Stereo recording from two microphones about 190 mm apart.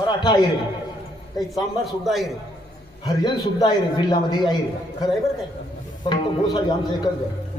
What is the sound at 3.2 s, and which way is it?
A man's voice, 25° left (ahead or behind).